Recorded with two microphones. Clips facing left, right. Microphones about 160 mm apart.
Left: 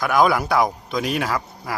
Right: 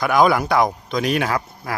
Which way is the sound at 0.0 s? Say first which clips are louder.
Right 2 dB; centre (ahead or behind).